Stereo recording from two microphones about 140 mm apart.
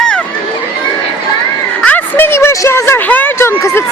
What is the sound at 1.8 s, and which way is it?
A woman's voice, 10° left (ahead or behind).